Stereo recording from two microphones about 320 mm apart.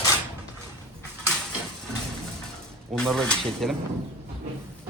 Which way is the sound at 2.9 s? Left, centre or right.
Centre.